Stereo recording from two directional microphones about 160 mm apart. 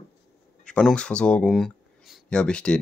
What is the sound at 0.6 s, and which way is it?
Speech, 5° left (ahead or behind).